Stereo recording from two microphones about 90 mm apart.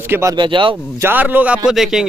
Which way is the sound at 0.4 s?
65° right (ahead or behind).